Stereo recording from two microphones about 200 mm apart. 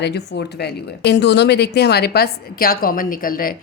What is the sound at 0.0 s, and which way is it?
Speech, 55° left (ahead or behind).